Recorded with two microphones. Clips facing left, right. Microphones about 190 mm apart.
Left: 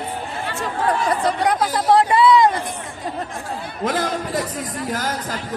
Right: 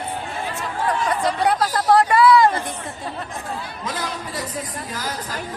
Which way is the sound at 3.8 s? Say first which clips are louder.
Left 10 dB; 55° left (ahead or behind).